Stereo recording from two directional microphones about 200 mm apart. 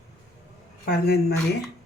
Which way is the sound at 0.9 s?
50° left (ahead or behind).